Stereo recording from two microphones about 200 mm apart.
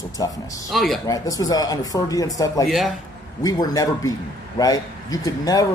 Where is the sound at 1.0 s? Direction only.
15° left (ahead or behind).